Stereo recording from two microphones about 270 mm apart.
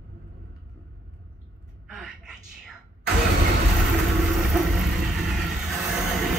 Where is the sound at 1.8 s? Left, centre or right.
Centre.